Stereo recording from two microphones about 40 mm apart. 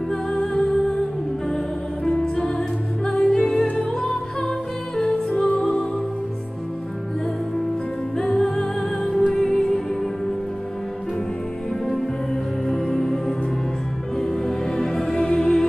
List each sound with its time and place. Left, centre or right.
0.1 s music: centre
2.0 s music: centre
4.9 s music: centre
8.2 s music: centre
12.6 s music: centre